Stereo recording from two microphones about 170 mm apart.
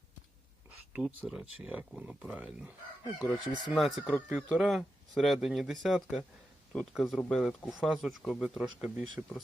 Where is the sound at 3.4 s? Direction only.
25° left (ahead or behind).